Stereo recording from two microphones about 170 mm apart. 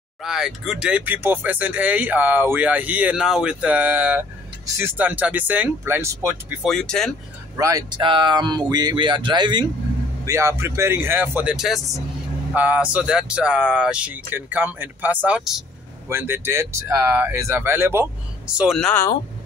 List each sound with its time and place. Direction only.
0.2 s speech: centre (ahead or behind)
6.6 s speech: 5° left (ahead or behind)
7.5 s speech: 20° right (ahead or behind)
10.2 s speech: 15° right (ahead or behind); by 18.9 s centre (ahead or behind)